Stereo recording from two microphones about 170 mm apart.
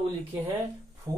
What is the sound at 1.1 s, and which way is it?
Speech, 20° right (ahead or behind).